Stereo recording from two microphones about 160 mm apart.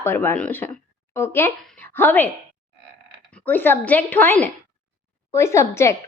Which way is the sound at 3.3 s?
10° left (ahead or behind).